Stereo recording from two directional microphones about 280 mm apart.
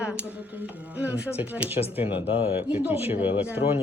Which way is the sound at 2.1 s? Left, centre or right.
Centre.